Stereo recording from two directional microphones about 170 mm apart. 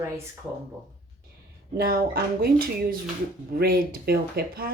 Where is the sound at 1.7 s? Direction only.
60° right (ahead or behind).